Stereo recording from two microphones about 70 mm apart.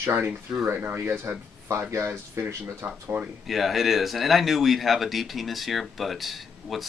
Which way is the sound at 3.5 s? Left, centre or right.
Centre.